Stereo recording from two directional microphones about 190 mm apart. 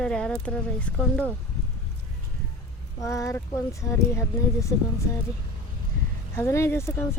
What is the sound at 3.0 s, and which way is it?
Speech, 15° left (ahead or behind).